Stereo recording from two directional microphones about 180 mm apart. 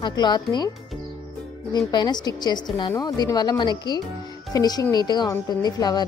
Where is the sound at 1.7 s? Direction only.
25° left (ahead or behind).